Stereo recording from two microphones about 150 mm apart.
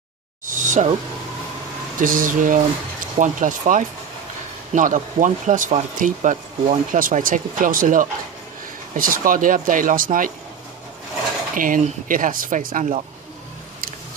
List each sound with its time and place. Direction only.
0.5 s a sound: 60° right (ahead or behind)
2.0 s speech: 65° right (ahead or behind)
11.5 s speech: 65° right (ahead or behind)